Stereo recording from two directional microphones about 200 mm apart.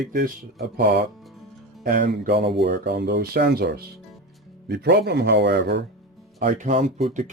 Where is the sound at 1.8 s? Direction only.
45° right (ahead or behind).